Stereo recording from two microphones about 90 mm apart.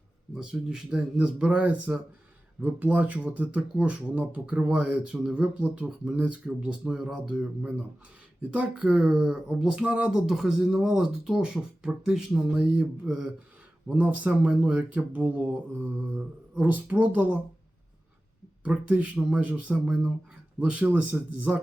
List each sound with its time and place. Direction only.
0.3 s speech: 10° right (ahead or behind)
8.4 s speech: 15° right (ahead or behind)
18.6 s speech: 15° right (ahead or behind)